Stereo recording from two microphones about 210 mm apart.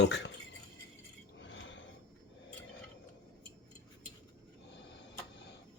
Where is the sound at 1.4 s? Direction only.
60° left (ahead or behind).